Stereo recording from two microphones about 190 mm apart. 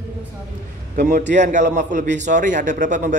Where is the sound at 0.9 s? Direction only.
40° right (ahead or behind).